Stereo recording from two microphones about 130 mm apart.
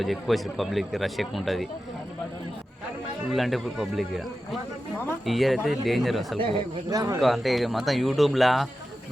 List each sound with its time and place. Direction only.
0.0 s a man's voice: centre (ahead or behind)
3.2 s a man's voice: centre (ahead or behind)
5.2 s a man's voice: centre (ahead or behind)
6.9 s speech: 30° right (ahead or behind)
7.2 s a man's voice: centre (ahead or behind)